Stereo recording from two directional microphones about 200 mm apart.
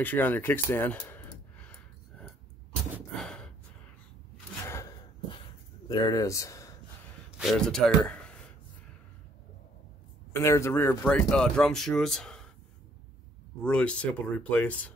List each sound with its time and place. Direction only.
0.0 s a sound: 10° left (ahead or behind)
3.1 s gasp: 5° left (ahead or behind)
4.6 s gasp: 15° left (ahead or behind)
5.9 s speech: 20° left (ahead or behind)
7.3 s a man's voice: centre (ahead or behind)
10.3 s speech: 15° left (ahead or behind)
13.6 s speech: 5° left (ahead or behind)